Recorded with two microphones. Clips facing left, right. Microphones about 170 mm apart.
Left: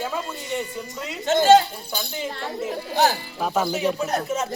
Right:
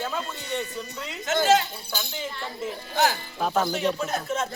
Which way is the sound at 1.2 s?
30° left (ahead or behind).